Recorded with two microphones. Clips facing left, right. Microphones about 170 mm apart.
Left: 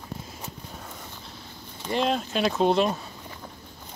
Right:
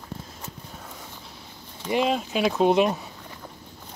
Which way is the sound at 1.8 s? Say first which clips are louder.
Right 2 dB; 5° right (ahead or behind).